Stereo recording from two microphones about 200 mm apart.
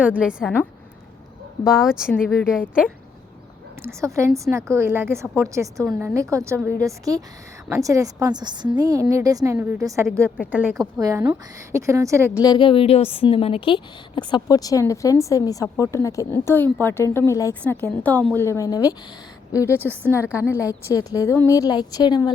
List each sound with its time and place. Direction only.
0.0 s a woman's voice: 5° right (ahead or behind)
1.6 s a woman's voice: centre (ahead or behind)
3.8 s a woman's voice: 15° right (ahead or behind)
10.2 s a woman's voice: 5° left (ahead or behind)
10.5 s a woman's voice: 5° right (ahead or behind)
12.4 s a woman's voice: 20° left (ahead or behind)
19.6 s a woman's voice: 10° right (ahead or behind)
20.3 s a woman's voice: 15° left (ahead or behind)